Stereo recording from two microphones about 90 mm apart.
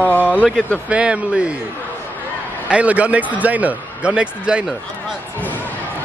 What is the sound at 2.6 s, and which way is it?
A man's voice, 15° right (ahead or behind).